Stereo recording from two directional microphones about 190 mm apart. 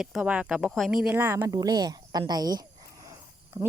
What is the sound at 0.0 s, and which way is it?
A woman's voice, 5° right (ahead or behind).